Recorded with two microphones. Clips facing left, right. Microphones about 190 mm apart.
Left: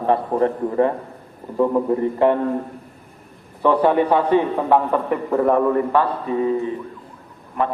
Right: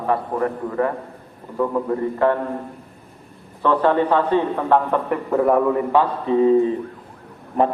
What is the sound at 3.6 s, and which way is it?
A man's voice, 15° left (ahead or behind).